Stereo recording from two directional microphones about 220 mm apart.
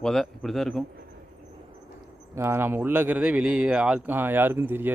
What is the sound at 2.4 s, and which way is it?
A man's voice, 10° right (ahead or behind).